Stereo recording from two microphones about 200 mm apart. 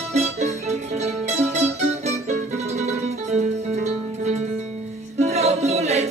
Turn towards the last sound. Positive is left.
turn(degrees=-30)  # may be behind; listen again after turning